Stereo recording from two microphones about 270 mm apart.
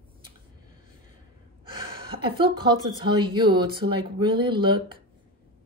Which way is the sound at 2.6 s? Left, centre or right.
Centre.